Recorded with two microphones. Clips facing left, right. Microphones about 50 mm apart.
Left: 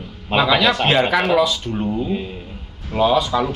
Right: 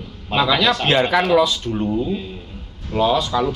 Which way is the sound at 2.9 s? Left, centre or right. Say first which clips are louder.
Left 1 dB; centre.